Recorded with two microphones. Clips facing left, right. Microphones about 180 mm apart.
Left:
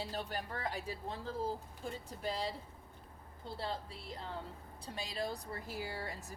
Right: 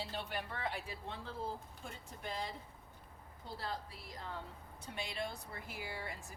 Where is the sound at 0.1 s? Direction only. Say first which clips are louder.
Left 2 dB; 40° left (ahead or behind).